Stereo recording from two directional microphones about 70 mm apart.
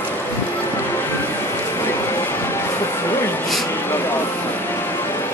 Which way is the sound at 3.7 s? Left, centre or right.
Left.